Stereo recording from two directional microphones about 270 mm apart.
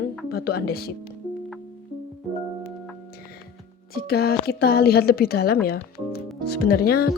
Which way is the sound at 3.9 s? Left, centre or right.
Left.